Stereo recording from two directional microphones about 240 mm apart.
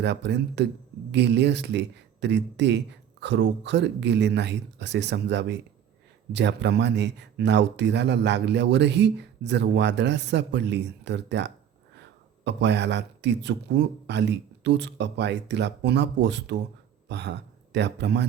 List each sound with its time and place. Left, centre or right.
0.0 s a man's voice: right